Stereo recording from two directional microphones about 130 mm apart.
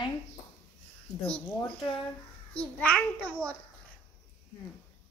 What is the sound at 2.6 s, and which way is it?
Child singing, 10° left (ahead or behind).